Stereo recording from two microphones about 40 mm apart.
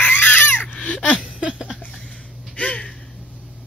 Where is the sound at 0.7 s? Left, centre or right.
Left.